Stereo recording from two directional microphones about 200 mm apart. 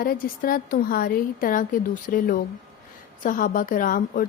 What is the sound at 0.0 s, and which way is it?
A woman's voice, 45° left (ahead or behind).